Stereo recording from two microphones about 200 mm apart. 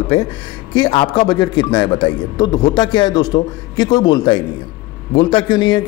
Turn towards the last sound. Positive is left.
turn(degrees=20)  # may be behind; listen again after turning